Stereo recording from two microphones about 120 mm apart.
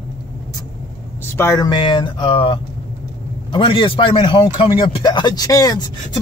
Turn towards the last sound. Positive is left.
turn(degrees=30)  # may be behind; listen again after turning